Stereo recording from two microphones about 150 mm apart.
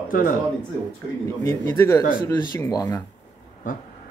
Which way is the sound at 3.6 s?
60° left (ahead or behind).